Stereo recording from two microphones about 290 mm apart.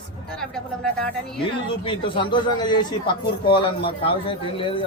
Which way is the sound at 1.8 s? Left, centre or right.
Centre.